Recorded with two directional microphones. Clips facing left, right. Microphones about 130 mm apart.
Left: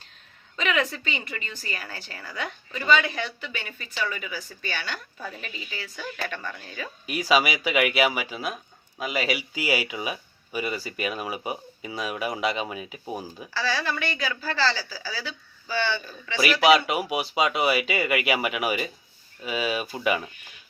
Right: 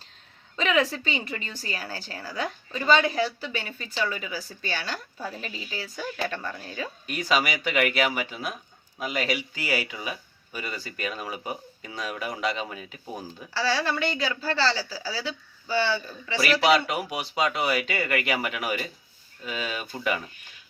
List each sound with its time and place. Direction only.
0.5 s a woman's voice: 30° right (ahead or behind)
4.8 s speech: centre (ahead or behind)
5.4 s speech: 30° right (ahead or behind)
6.4 s speech: centre (ahead or behind)
13.5 s speech: 30° right (ahead or behind)
16.4 s speech: centre (ahead or behind)